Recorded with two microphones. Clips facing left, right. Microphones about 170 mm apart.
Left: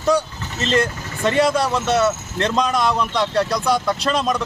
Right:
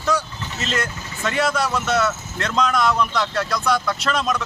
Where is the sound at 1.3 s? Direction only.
30° left (ahead or behind).